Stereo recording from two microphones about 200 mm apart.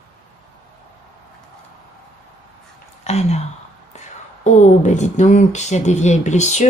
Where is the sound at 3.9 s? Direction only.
35° left (ahead or behind).